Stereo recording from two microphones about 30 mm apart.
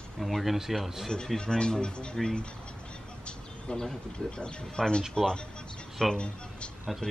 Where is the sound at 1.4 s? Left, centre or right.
Left.